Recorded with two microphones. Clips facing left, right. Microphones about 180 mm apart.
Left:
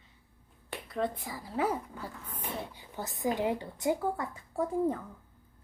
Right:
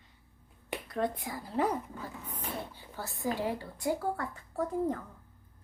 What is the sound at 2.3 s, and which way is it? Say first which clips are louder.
Speech: left 1 dB; 15° left (ahead or behind).